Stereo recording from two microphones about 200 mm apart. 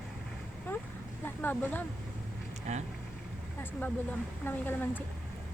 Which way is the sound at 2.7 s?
35° right (ahead or behind).